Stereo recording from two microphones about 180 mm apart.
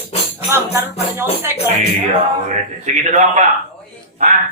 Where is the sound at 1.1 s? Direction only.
15° right (ahead or behind).